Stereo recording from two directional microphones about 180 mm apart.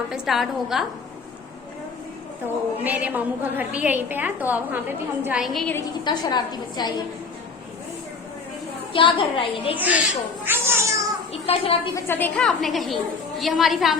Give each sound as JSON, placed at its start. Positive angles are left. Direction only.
{"t": 0.1, "sound": "a woman's voice", "side_deg": 0}
{"t": 2.8, "sound": "a woman's voice", "side_deg": -10}
{"t": 6.1, "sound": "a woman's voice", "side_deg": 25}
{"t": 8.9, "sound": "a woman's voice", "side_deg": 30}
{"t": 9.7, "sound": "a woman's voice", "side_deg": -10}
{"t": 10.4, "sound": "a sound", "side_deg": -10}
{"t": 11.4, "sound": "a woman's voice", "side_deg": 35}
{"t": 11.9, "sound": "a woman's voice", "side_deg": 10}